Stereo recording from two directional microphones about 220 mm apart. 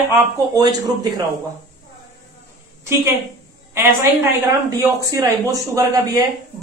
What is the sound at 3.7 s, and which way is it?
Speech, 15° right (ahead or behind).